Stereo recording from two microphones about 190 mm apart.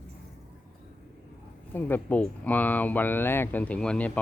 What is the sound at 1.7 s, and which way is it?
Speech, 10° left (ahead or behind).